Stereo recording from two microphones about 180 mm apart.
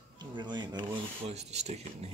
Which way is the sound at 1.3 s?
35° right (ahead or behind).